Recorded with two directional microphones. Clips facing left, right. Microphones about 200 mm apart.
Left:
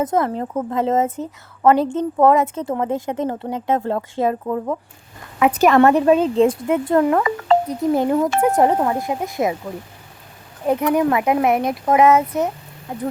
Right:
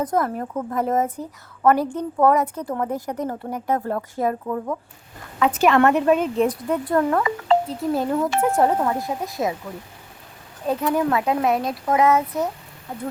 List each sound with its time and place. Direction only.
0.0 s a woman's voice: 25° left (ahead or behind)
7.2 s speech: 50° left (ahead or behind)
7.7 s a woman's voice: 20° left (ahead or behind)
10.7 s a woman's voice: 15° left (ahead or behind)